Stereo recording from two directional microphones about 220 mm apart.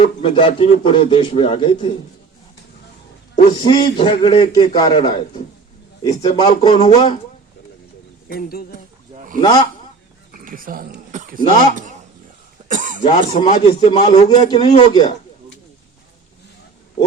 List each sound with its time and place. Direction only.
0.0 s speech: 25° left (ahead or behind)
3.3 s speech: 20° left (ahead or behind)
8.3 s speech: 40° left (ahead or behind)
9.1 s speech: 35° right (ahead or behind)
10.3 s a sound: 40° right (ahead or behind)
11.7 s speech: 35° right (ahead or behind)
12.6 s cough: 35° right (ahead or behind)
13.0 s speech: 25° left (ahead or behind)